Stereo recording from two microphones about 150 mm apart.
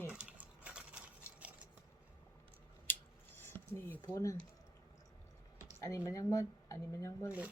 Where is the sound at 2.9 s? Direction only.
15° left (ahead or behind).